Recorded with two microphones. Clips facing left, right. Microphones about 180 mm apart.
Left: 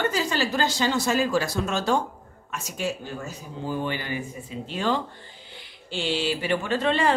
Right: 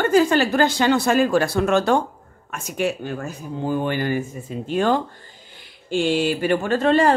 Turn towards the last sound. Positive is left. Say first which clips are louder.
# right 6 dB
turn(degrees=-45)  # may be behind; listen again after turning